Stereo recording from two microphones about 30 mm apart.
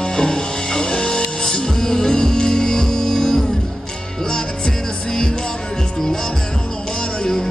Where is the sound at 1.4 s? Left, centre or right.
Centre.